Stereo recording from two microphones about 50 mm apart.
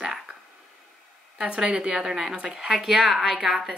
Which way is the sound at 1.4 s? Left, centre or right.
Centre.